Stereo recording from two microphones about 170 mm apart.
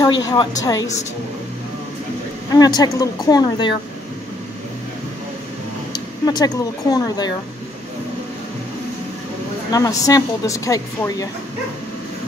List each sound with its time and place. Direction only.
0.3 s a woman's voice: 25° left (ahead or behind)
2.5 s a woman's voice: 20° left (ahead or behind)
5.9 s speech: 25° left (ahead or behind)
9.7 s a woman's voice: 20° left (ahead or behind)